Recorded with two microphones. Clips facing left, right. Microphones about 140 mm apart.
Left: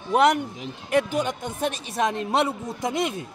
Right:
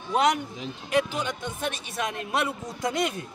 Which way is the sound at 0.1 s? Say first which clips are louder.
Left 4 dB; 60° left (ahead or behind).